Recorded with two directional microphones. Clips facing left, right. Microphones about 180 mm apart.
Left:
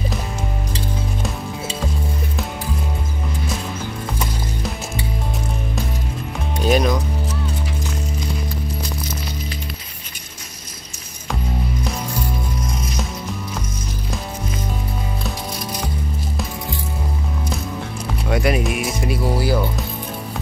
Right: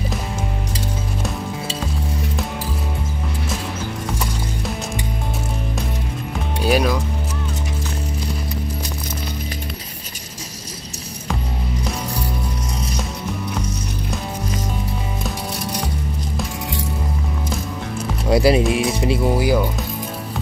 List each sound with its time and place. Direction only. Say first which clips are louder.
6.6 s speech: left 1 dB; 5° right (ahead or behind)
18.3 s speech: right 5 dB; 30° right (ahead or behind); by 19.7 s 15° right (ahead or behind)